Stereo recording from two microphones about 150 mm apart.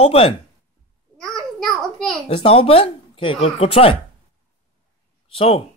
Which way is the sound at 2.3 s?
40° left (ahead or behind).